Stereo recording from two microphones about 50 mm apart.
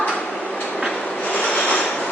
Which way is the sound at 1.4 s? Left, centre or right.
Left.